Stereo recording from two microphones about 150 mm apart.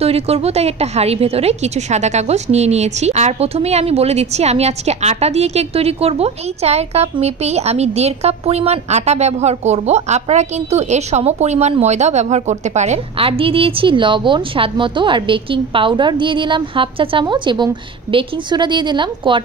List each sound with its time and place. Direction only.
0.0 s a woman's voice: 40° right (ahead or behind)